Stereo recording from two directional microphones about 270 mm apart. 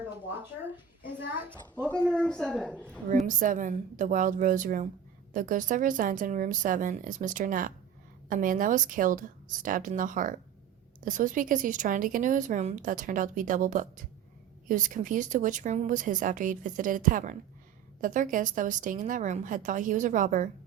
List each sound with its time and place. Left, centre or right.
1.4 s a woman's voice: centre
1.9 s speech: centre
3.2 s a woman's voice: right